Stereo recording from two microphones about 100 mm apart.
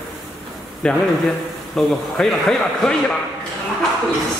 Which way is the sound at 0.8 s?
5° left (ahead or behind).